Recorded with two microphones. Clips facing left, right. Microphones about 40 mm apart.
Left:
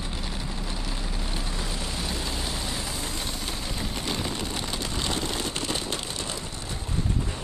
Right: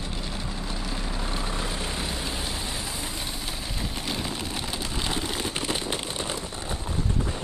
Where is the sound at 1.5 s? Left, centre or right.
Right.